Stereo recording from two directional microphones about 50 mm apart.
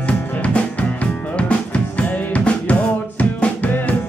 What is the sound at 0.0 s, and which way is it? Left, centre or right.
Music, left.